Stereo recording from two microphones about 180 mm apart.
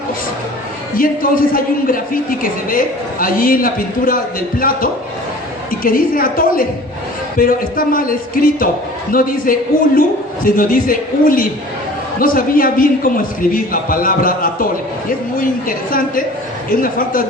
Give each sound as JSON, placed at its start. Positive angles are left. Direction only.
{"t": 0.9, "sound": "a man's voice", "side_deg": 50}